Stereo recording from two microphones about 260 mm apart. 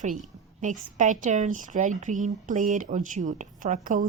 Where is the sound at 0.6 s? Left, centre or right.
Right.